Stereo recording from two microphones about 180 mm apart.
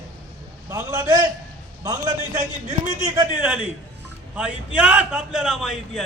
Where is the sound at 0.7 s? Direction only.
20° right (ahead or behind).